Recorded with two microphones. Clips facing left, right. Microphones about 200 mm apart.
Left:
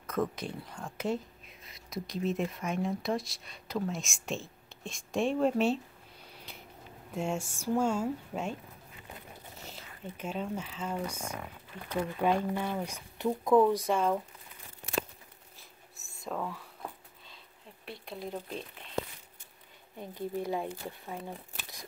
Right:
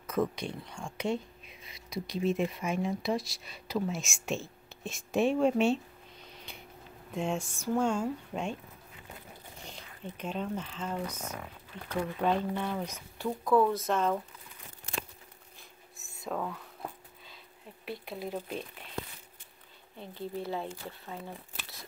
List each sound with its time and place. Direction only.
0.0 s speech: centre (ahead or behind)
6.2 s a sound: 5° left (ahead or behind)
7.1 s speech: 10° left (ahead or behind)
9.7 s speech: 5° left (ahead or behind)
13.2 s speech: 20° left (ahead or behind)
16.3 s a sound: centre (ahead or behind)
17.8 s speech: 5° right (ahead or behind)
20.0 s speech: 15° left (ahead or behind)